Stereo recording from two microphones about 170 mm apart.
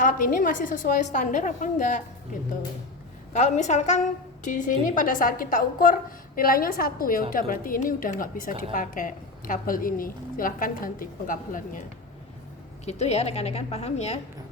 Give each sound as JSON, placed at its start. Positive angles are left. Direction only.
{"t": 0.0, "sound": "a woman's voice", "side_deg": 55}
{"t": 3.3, "sound": "a woman's voice", "side_deg": 45}
{"t": 12.8, "sound": "a woman's voice", "side_deg": 40}